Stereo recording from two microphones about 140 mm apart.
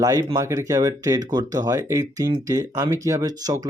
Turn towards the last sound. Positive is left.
turn(degrees=-25)  # may be behind; listen again after turning